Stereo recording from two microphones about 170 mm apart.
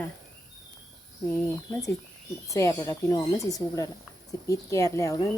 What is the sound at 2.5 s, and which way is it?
A woman's voice, 20° left (ahead or behind).